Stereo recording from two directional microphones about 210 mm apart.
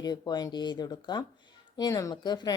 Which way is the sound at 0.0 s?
20° left (ahead or behind).